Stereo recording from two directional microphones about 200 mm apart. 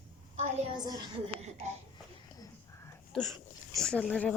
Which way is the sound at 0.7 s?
20° right (ahead or behind).